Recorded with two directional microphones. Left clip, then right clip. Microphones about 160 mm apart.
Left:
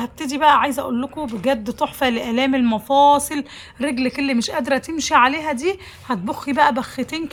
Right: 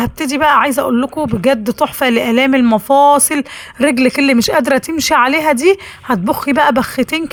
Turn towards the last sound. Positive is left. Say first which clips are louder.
# right 9 dB
turn(degrees=-30)  # may be behind; listen again after turning